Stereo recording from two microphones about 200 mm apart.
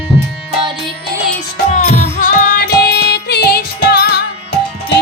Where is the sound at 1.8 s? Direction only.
40° left (ahead or behind).